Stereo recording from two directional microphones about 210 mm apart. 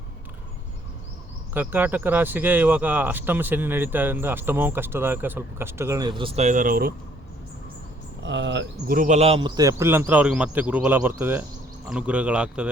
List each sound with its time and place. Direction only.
1.5 s speech: 10° right (ahead or behind); by 6.9 s 45° right (ahead or behind)
8.2 s speech: 60° right (ahead or behind)
8.9 s a man's voice: 35° right (ahead or behind); by 12.7 s 5° right (ahead or behind)